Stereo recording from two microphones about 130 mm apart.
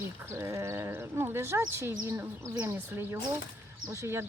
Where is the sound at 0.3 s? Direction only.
20° right (ahead or behind).